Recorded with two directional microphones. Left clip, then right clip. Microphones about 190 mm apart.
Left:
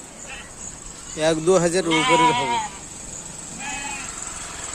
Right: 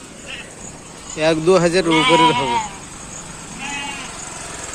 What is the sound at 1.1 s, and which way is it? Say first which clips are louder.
Speech: right 4 dB; 20° left (ahead or behind).